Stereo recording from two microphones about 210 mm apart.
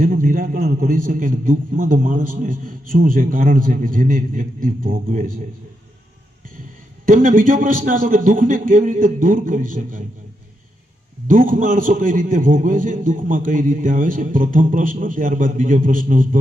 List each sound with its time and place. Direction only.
0.0 s a man's voice: 40° right (ahead or behind)
7.0 s a man's voice: 40° right (ahead or behind)
11.3 s a man's voice: 40° right (ahead or behind)